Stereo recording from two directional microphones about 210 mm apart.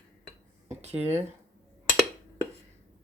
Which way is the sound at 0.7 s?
30° right (ahead or behind).